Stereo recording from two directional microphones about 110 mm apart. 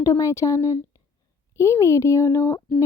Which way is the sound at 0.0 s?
30° left (ahead or behind).